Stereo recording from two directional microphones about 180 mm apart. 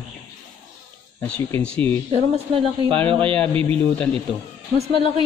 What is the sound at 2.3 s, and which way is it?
Speech, 30° right (ahead or behind).